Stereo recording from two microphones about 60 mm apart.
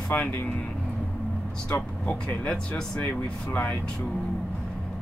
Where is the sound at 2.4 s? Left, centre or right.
Centre.